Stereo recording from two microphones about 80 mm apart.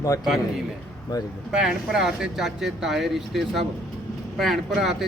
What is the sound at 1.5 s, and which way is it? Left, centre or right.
Speech, centre.